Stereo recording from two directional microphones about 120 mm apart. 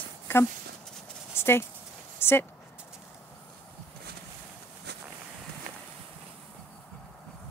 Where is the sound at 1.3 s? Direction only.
20° left (ahead or behind).